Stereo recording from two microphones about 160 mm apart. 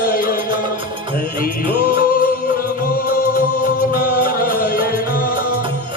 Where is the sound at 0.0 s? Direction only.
65° left (ahead or behind).